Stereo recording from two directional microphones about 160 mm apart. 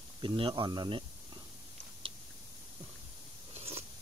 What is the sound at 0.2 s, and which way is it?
Speech, 30° right (ahead or behind).